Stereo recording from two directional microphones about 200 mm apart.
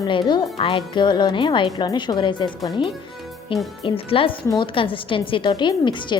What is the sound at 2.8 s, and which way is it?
Speech, centre (ahead or behind).